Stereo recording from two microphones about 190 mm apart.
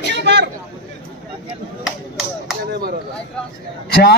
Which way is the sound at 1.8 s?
Centre (ahead or behind).